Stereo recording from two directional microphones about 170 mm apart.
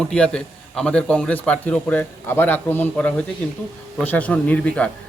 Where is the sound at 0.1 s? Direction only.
5° left (ahead or behind).